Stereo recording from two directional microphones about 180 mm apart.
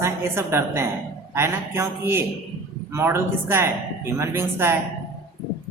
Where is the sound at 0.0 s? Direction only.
15° right (ahead or behind).